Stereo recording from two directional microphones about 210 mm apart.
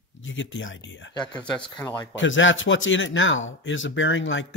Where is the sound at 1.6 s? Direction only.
20° left (ahead or behind).